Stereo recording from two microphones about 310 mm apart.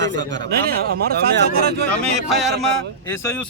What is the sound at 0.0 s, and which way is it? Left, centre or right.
Speech, right.